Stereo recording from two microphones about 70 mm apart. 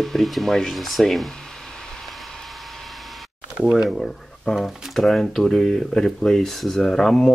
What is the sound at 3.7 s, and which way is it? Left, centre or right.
Speech, centre.